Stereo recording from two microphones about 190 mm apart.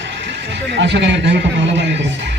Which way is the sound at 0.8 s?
70° right (ahead or behind).